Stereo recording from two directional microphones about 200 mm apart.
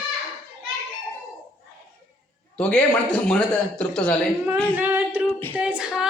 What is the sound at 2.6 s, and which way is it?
A man's voice, 5° left (ahead or behind).